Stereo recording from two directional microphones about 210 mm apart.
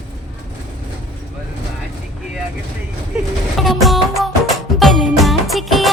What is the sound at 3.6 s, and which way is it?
Music, centre (ahead or behind).